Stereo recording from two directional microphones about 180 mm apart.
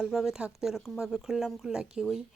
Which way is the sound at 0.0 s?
5° right (ahead or behind).